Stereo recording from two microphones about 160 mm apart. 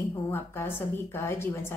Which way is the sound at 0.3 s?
15° left (ahead or behind).